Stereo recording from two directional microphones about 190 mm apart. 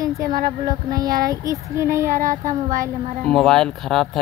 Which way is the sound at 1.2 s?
20° right (ahead or behind).